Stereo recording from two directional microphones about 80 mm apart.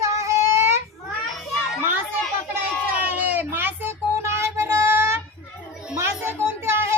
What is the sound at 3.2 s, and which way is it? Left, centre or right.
Child singing, right.